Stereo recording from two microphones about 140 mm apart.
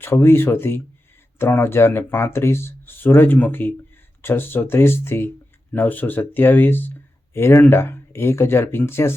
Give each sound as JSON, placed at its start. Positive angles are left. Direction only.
{"t": 0.0, "sound": "speech", "side_deg": 15}